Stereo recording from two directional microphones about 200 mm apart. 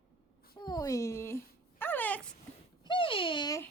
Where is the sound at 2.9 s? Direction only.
25° left (ahead or behind).